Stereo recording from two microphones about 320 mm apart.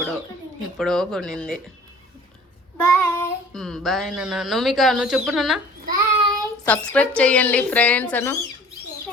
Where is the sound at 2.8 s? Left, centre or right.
Centre.